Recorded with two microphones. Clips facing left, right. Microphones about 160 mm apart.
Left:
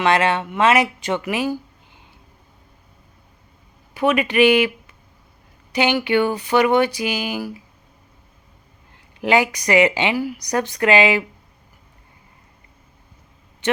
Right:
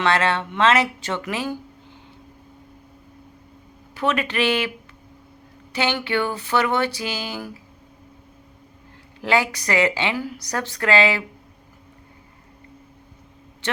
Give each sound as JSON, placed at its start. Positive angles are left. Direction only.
{"t": 0.0, "sound": "speech", "side_deg": 15}
{"t": 3.9, "sound": "speech", "side_deg": 10}
{"t": 5.7, "sound": "speech", "side_deg": 15}
{"t": 9.2, "sound": "speech", "side_deg": 15}